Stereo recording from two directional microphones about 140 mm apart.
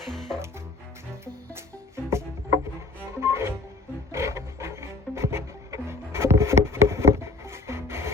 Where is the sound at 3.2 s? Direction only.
20° right (ahead or behind).